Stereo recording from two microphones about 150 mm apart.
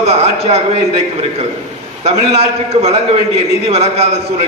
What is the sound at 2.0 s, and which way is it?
A man's voice, 45° right (ahead or behind).